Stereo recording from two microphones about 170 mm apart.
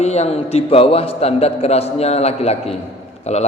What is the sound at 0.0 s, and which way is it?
A man's voice, 40° left (ahead or behind).